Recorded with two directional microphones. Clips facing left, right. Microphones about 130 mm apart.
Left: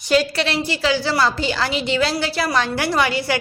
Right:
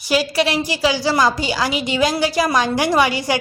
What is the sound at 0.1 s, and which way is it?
A woman's voice, 10° right (ahead or behind).